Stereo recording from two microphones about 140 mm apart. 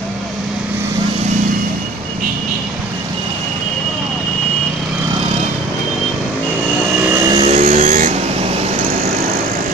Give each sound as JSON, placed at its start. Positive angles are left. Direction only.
{"t": 7.2, "sound": "vehicle", "side_deg": -30}
{"t": 7.5, "sound": "vehicle", "side_deg": -60}